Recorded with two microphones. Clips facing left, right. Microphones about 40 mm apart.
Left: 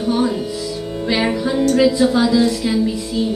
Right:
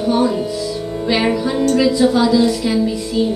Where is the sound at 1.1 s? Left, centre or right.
Centre.